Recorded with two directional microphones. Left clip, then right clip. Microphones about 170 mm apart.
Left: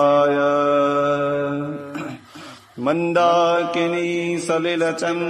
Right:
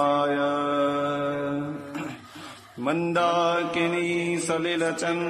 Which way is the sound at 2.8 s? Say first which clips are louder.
Left 6 dB; 30° left (ahead or behind).